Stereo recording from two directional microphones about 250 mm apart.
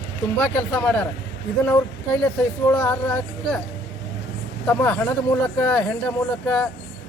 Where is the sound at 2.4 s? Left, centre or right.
Centre.